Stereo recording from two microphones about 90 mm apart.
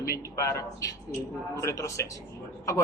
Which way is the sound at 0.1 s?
35° left (ahead or behind).